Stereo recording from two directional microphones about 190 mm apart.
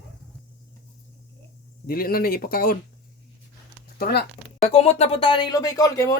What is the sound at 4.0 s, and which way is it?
Speech, 55° left (ahead or behind).